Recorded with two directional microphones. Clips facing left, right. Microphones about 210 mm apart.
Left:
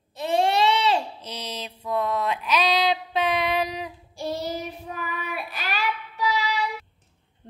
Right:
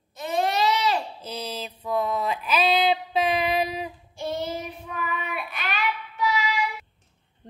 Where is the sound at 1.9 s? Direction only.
5° right (ahead or behind).